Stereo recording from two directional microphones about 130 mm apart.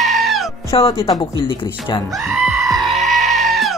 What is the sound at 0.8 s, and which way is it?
Speech, 50° left (ahead or behind).